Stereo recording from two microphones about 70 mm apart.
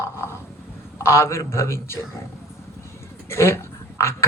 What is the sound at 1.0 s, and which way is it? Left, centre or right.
Speech, left.